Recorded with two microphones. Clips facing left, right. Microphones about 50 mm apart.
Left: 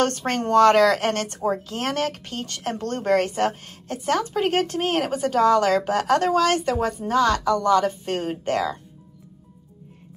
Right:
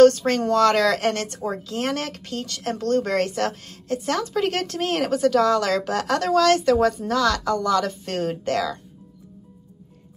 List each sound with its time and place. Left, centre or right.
0.0 s speech: left; by 7.0 s centre
7.0 s speech: left